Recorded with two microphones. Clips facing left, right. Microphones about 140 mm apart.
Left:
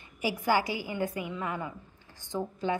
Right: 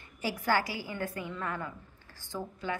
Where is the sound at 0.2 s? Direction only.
15° left (ahead or behind).